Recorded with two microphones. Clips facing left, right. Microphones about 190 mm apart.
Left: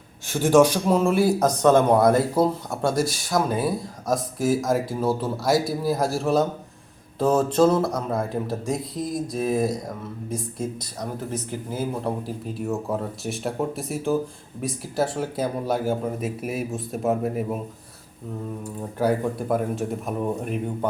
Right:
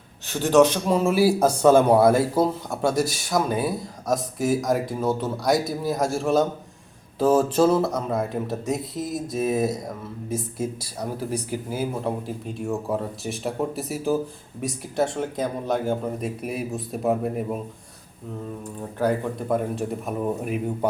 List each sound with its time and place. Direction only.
0.3 s speech: 10° left (ahead or behind)
18.6 s speech: 10° left (ahead or behind)